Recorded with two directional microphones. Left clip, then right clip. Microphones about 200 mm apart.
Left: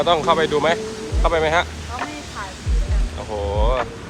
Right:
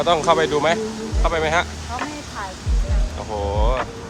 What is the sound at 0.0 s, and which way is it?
Speech, 15° right (ahead or behind).